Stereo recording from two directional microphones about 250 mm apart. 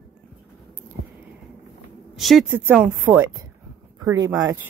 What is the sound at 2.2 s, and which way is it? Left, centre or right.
Speech, centre.